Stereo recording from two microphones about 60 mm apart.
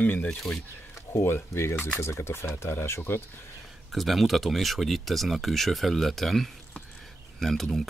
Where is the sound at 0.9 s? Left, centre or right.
Left.